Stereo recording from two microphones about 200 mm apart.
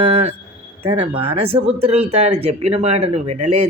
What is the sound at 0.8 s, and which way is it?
A woman's voice, 30° right (ahead or behind).